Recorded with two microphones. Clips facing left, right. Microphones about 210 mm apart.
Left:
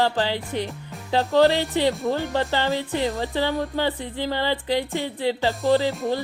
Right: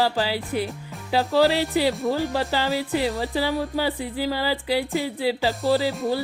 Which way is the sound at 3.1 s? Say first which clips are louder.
Even; centre (ahead or behind).